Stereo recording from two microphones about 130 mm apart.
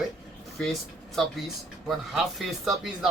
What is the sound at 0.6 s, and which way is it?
Speech, centre (ahead or behind).